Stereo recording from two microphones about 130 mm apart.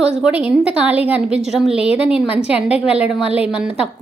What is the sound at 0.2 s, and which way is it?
A woman's voice, 10° right (ahead or behind).